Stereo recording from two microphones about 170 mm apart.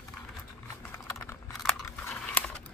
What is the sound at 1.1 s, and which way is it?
Typing, 15° left (ahead or behind).